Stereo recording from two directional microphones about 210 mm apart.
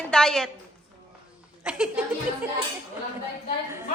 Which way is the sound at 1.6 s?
5° right (ahead or behind).